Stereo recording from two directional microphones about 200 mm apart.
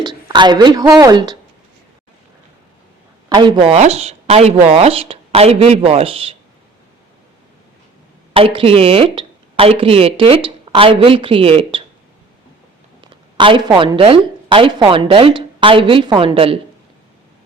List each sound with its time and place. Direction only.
0.0 s speech: 20° right (ahead or behind)
3.2 s speech: 20° right (ahead or behind)
8.3 s speech: 25° right (ahead or behind)
13.0 s a woman's voice: 25° right (ahead or behind)